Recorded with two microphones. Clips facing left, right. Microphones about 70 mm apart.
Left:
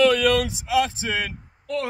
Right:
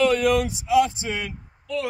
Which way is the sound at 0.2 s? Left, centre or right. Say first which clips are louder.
Even; left.